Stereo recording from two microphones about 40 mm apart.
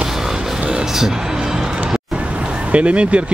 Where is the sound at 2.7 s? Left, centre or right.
Right.